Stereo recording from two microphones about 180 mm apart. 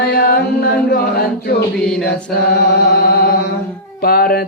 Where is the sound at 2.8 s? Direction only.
60° left (ahead or behind).